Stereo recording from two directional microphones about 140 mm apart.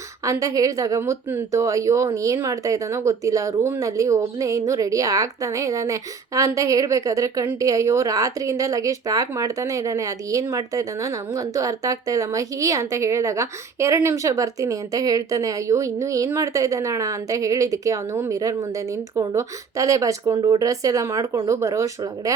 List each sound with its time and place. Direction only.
0.3 s speech: 25° right (ahead or behind)